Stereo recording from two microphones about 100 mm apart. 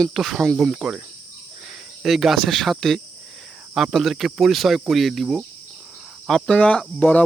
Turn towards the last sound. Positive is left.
turn(degrees=15)  # may be behind; listen again after turning